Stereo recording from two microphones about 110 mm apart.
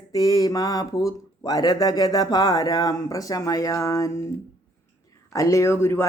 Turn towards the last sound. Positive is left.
turn(degrees=25)  # may be behind; listen again after turning